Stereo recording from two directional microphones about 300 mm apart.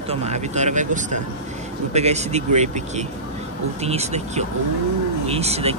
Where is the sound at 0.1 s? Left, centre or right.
Right.